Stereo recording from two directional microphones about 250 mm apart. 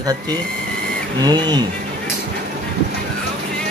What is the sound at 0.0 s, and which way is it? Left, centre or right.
Speech, centre.